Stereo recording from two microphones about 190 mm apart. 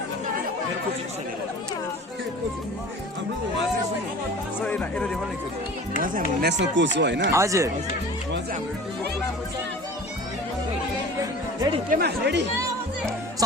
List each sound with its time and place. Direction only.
4.6 s speech: 5° left (ahead or behind)
6.4 s speech: 70° right (ahead or behind)
7.3 s speech: 15° right (ahead or behind)
11.9 s speech: 55° right (ahead or behind)